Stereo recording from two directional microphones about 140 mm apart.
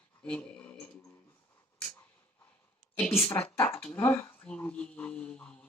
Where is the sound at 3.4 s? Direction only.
45° left (ahead or behind).